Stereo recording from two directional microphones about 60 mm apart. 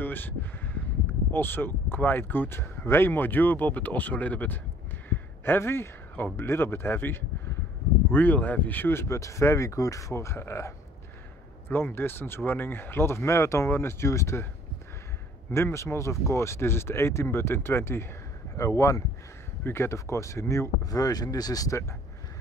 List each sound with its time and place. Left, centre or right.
0.0 s speech: left
5.1 s speech: left
8.9 s speech: left
11.7 s speech: left
15.5 s speech: left
18.6 s speech: left
19.6 s speech: left
20.8 s speech: left